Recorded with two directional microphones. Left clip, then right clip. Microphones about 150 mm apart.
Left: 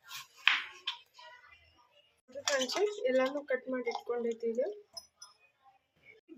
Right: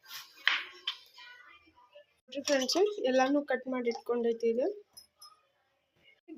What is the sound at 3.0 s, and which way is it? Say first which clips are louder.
Speech: right 3 dB; 55° right (ahead or behind).